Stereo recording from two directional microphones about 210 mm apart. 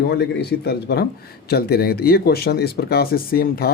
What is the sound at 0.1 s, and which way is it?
Speech, 50° left (ahead or behind).